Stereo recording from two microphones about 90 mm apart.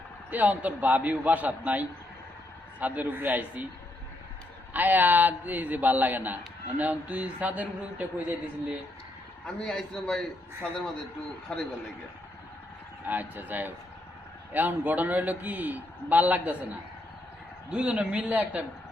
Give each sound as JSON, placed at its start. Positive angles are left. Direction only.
{"t": 0.3, "sound": "a man's voice", "side_deg": -20}
{"t": 4.7, "sound": "a man's voice", "side_deg": -20}
{"t": 9.6, "sound": "a man's voice", "side_deg": 5}
{"t": 13.1, "sound": "a man's voice", "side_deg": -20}
{"t": 17.7, "sound": "a man's voice", "side_deg": -10}